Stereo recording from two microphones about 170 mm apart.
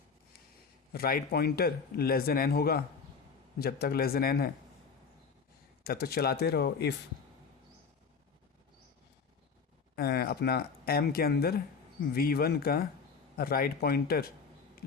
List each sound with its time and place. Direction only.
0.9 s speech: 60° left (ahead or behind)
5.8 s speech: 65° left (ahead or behind)
9.9 s speech: 65° left (ahead or behind)